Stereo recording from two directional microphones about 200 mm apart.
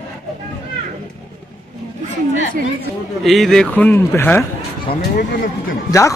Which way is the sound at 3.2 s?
Centre (ahead or behind).